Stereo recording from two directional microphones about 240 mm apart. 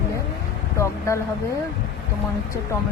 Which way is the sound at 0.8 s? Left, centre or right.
Centre.